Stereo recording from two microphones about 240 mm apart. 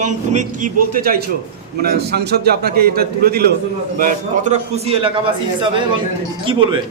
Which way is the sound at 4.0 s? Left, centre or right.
Right.